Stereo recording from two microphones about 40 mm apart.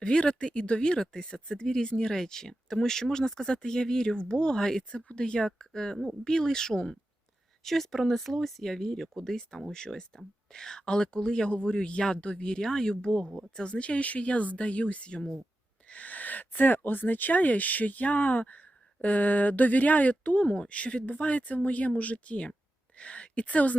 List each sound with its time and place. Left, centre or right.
0.0 s speech: left
4.8 s speech: left
7.6 s speech: centre; by 15.3 s left
15.9 s speech: left